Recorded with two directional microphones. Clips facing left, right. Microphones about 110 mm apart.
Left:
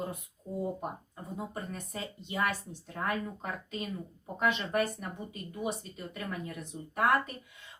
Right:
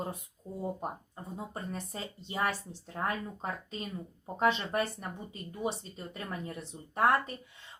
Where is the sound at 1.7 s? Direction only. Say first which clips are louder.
Even; 30° right (ahead or behind).